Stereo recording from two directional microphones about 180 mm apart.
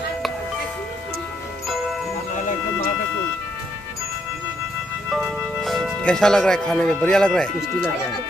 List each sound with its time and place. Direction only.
2.3 s music: 45° left (ahead or behind)
5.1 s speech: centre (ahead or behind)